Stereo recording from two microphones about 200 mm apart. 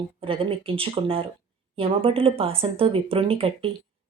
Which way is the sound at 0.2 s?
25° right (ahead or behind).